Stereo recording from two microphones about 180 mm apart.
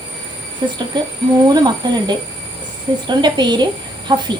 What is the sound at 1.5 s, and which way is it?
A woman's voice, 25° right (ahead or behind).